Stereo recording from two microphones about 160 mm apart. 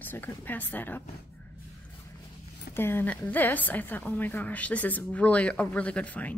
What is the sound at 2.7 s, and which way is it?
A woman's voice, 15° left (ahead or behind).